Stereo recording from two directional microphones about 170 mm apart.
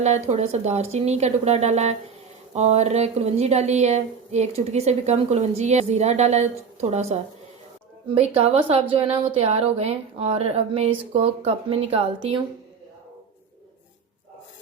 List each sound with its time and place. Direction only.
0.0 s a woman's voice: 40° right (ahead or behind)
8.4 s a woman's voice: 35° right (ahead or behind)